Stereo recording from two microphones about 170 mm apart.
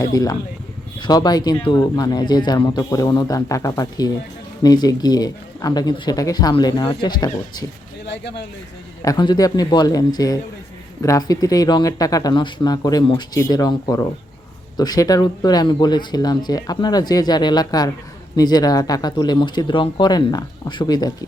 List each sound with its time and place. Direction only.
0.0 s speech: 20° left (ahead or behind)
9.0 s speech: 20° left (ahead or behind)